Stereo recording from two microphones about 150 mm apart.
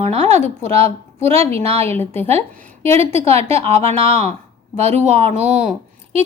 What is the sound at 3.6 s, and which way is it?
Speech, 45° right (ahead or behind).